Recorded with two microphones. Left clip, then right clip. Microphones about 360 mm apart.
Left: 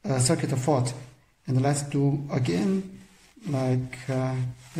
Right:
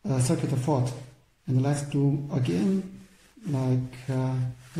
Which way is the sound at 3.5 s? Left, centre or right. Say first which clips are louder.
Left 2 dB; left.